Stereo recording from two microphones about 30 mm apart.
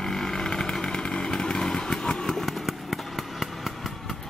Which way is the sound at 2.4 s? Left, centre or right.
Centre.